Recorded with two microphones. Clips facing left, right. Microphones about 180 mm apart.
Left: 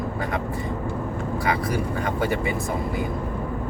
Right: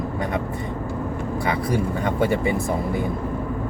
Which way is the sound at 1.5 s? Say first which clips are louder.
Right 2 dB; 25° right (ahead or behind).